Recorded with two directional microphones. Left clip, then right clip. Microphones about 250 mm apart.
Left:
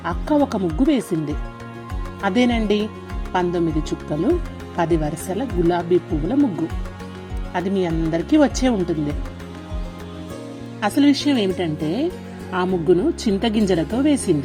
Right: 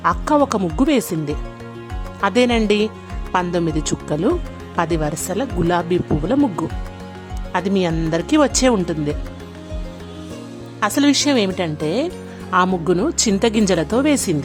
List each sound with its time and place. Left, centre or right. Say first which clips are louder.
0.0 s a woman's voice: right 4 dB; centre
2.2 s a woman's voice: right 4 dB; centre
7.5 s a woman's voice: right 3 dB; centre
10.8 s a woman's voice: right 2 dB; centre